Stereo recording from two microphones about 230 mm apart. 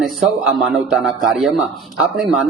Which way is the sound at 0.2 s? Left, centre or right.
Centre.